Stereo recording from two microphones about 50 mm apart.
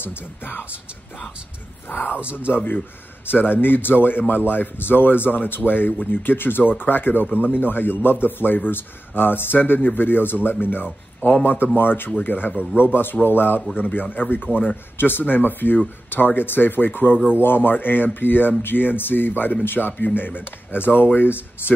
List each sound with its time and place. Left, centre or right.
0.0 s a man's voice: left
1.9 s a man's voice: left